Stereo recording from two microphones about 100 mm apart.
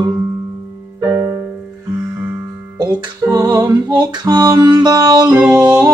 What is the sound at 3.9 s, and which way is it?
Music, 45° right (ahead or behind).